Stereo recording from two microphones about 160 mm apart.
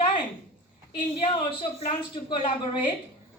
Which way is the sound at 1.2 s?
35° left (ahead or behind).